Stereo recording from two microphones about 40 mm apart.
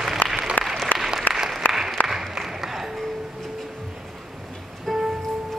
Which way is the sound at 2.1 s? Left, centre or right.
Centre.